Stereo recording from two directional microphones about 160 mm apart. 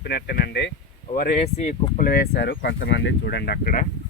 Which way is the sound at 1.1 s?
60° left (ahead or behind).